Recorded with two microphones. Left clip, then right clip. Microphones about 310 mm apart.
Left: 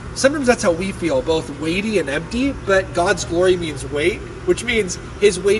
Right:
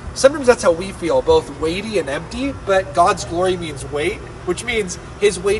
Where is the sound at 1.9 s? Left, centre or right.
Right.